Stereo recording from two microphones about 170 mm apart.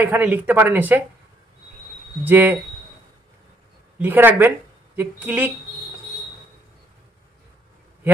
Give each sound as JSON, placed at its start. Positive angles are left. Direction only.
{"t": 0.0, "sound": "speech", "side_deg": -10}
{"t": 2.2, "sound": "speech", "side_deg": -10}
{"t": 4.0, "sound": "speech", "side_deg": -10}